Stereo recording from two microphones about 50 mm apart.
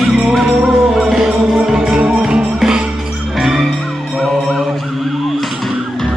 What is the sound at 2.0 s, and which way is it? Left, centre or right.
Music, centre.